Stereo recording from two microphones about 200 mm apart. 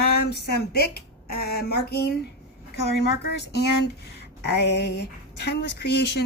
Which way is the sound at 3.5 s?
55° left (ahead or behind).